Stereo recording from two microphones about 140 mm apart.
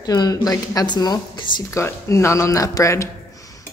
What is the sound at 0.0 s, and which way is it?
Speech, 30° left (ahead or behind).